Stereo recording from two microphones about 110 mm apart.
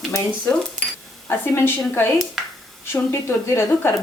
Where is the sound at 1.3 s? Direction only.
20° left (ahead or behind).